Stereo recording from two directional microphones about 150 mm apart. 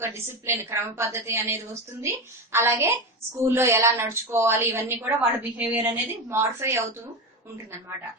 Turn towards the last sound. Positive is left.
turn(degrees=-20)  # may be behind; listen again after turning